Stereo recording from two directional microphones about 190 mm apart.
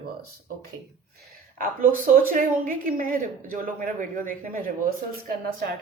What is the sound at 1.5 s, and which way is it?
A woman's voice, 45° right (ahead or behind).